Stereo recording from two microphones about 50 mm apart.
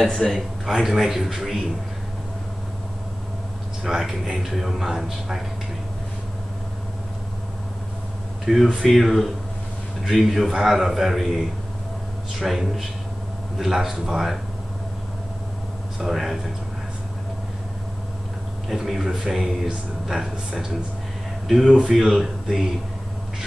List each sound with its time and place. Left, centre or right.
0.0 s a man's voice: centre
0.7 s speech: centre
3.8 s speech: centre
8.5 s a man's voice: centre
16.0 s speech: centre
18.7 s speech: centre
21.6 s a man's voice: centre
21.9 s speech: centre